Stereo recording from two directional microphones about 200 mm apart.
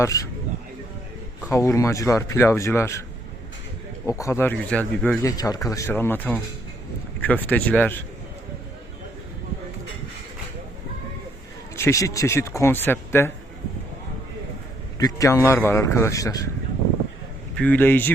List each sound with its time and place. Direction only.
0.0 s speech: 15° left (ahead or behind)
1.5 s speech: 15° left (ahead or behind)
4.2 s speech: 15° left (ahead or behind)
11.8 s speech: 15° left (ahead or behind)
14.9 s speech: 15° left (ahead or behind)
17.5 s speech: 5° left (ahead or behind)